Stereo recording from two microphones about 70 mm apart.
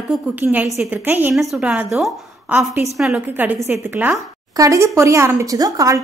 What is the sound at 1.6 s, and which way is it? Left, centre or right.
Speech, centre.